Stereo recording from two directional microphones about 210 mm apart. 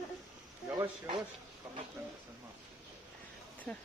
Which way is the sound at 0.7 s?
25° right (ahead or behind).